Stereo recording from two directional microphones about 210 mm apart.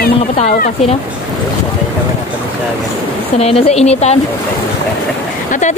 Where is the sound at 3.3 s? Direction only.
30° left (ahead or behind).